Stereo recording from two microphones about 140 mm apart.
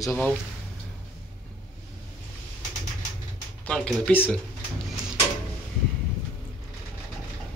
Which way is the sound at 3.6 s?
5° left (ahead or behind).